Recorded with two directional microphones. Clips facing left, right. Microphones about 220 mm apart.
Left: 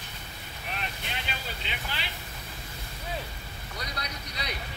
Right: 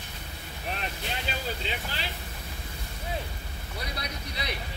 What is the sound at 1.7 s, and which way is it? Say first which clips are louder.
Vehicle: right 3 dB; 35° right (ahead or behind).